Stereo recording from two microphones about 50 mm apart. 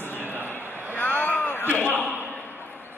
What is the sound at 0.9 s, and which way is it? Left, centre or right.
Vehicle, left.